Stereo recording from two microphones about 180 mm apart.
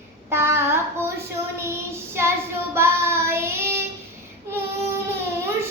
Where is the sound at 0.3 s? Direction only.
15° right (ahead or behind).